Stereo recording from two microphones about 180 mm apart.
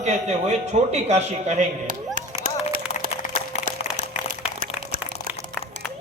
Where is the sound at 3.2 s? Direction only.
40° left (ahead or behind).